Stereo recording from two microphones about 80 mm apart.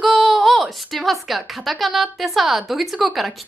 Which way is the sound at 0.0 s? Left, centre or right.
Centre.